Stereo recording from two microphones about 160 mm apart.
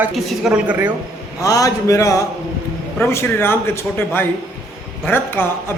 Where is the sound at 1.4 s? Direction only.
20° left (ahead or behind).